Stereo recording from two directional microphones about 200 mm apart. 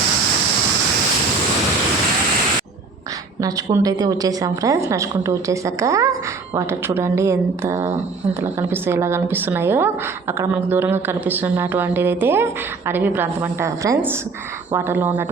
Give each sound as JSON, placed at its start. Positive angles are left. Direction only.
{"t": 3.4, "sound": "a woman's voice", "side_deg": -20}